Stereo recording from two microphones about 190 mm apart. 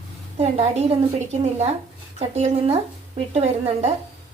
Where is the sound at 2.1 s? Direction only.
35° right (ahead or behind).